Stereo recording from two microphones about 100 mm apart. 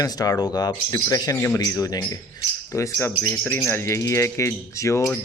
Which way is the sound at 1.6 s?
35° left (ahead or behind).